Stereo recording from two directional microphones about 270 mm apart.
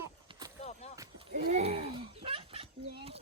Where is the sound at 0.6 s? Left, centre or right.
Left.